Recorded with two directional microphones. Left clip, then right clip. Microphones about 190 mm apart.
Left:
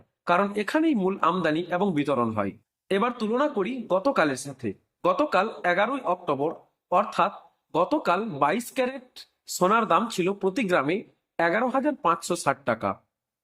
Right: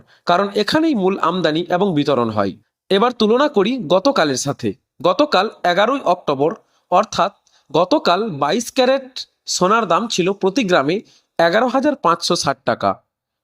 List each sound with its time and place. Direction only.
0.3 s speech: 35° right (ahead or behind)